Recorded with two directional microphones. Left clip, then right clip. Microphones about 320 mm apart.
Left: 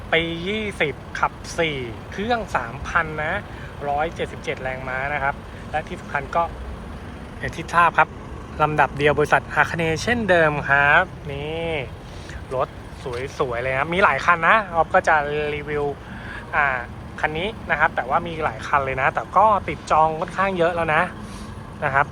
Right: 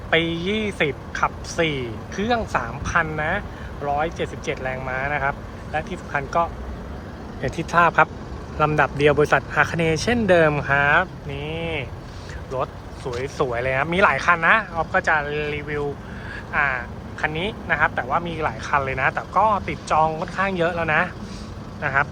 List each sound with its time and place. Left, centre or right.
0.1 s speech: centre
13.1 s speech: centre